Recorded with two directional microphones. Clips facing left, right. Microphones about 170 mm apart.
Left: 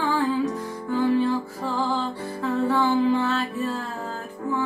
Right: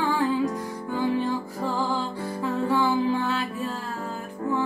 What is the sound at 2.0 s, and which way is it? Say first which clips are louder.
Music: left 1 dB; 10° right (ahead or behind).